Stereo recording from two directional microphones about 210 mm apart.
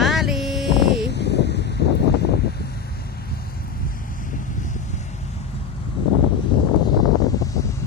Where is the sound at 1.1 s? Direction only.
55° left (ahead or behind).